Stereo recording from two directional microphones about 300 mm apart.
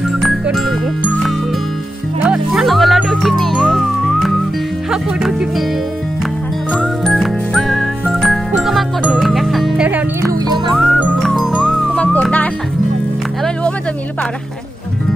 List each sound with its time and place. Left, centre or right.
0.2 s music: centre
4.9 s speech: centre
6.7 s music: centre
10.8 s music: centre